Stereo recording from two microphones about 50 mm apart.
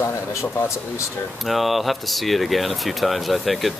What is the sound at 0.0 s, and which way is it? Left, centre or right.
Speech, left.